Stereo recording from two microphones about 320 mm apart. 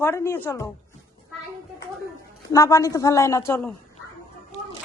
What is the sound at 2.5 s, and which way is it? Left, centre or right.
A man's voice, centre.